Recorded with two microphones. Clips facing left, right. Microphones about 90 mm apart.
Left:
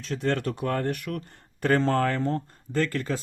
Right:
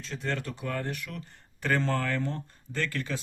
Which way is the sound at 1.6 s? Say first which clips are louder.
Left 6 dB; 40° left (ahead or behind).